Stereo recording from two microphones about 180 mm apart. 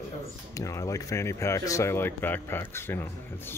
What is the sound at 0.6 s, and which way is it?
Speech, 20° left (ahead or behind).